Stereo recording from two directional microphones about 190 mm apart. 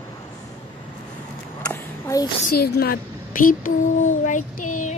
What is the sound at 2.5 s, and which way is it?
A child's voice, 55° left (ahead or behind).